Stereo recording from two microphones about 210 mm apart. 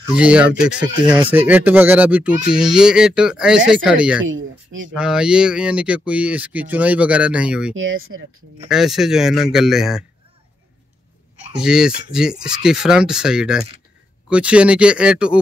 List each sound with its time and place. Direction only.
0.1 s speech: 5° right (ahead or behind)
7.7 s speech: 70° right (ahead or behind)
8.6 s speech: centre (ahead or behind)
11.5 s speech: 5° right (ahead or behind)